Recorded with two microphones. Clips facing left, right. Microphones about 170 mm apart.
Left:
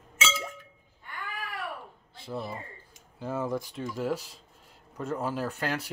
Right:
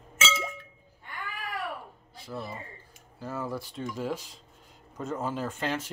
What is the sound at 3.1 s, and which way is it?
Speech, 25° left (ahead or behind).